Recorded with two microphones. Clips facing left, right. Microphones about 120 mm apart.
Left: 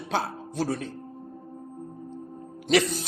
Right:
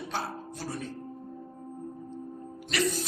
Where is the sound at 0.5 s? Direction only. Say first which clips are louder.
Left 11 dB; 80° left.